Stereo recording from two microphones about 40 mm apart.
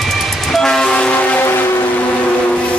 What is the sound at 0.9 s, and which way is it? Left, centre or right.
Train, left.